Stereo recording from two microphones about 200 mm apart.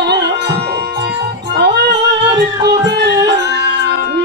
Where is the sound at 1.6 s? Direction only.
55° right (ahead or behind).